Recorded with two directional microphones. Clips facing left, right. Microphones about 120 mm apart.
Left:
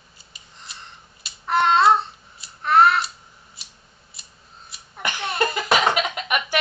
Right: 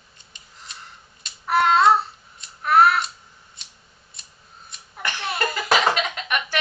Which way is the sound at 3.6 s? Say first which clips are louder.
Left 1 dB; 5° left (ahead or behind).